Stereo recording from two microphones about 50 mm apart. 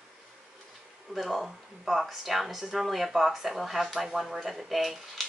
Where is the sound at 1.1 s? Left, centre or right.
Centre.